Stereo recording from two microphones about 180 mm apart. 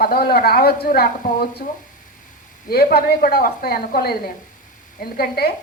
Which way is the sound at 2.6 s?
60° left (ahead or behind).